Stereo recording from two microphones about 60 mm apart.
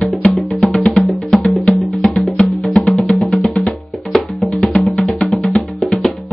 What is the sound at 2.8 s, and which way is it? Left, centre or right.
Music, left.